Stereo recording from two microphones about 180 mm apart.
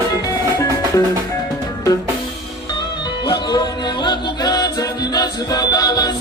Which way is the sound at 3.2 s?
25° left (ahead or behind).